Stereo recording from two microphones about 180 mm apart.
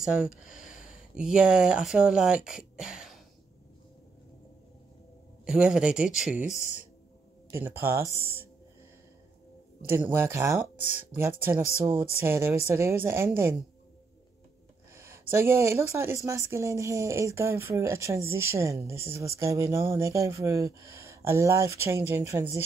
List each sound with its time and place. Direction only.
0.0 s speech: 5° right (ahead or behind)
5.4 s speech: 5° right (ahead or behind)
6.4 s speech: 40° left (ahead or behind)
7.6 s speech: 10° right (ahead or behind)
9.8 s speech: 10° right (ahead or behind)
15.0 s a sound: 15° right (ahead or behind)
15.9 s speech: 15° right (ahead or behind)